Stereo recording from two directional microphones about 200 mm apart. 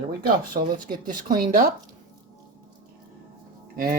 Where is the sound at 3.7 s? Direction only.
45° right (ahead or behind).